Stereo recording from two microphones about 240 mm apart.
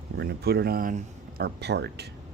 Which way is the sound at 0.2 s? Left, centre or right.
Right.